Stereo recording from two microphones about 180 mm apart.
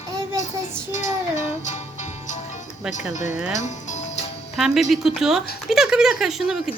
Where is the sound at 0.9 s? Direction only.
40° left (ahead or behind).